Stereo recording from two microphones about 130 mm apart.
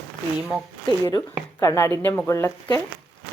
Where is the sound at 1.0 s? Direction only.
20° left (ahead or behind).